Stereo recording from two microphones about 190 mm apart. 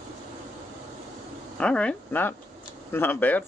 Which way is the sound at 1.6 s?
5° left (ahead or behind).